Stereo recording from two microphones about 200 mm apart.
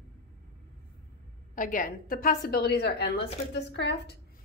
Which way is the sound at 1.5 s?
40° left (ahead or behind).